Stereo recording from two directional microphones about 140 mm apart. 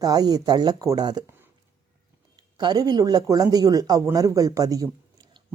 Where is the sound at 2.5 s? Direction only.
30° right (ahead or behind).